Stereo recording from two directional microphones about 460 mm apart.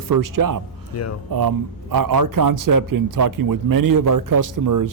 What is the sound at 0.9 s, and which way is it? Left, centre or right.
Speech, left.